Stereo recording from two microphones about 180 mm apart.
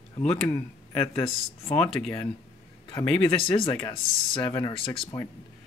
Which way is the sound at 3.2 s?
30° left (ahead or behind).